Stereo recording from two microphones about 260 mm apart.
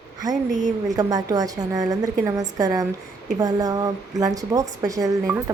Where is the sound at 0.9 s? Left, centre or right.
Centre.